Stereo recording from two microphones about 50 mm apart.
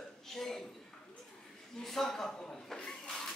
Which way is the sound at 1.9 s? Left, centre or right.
Centre.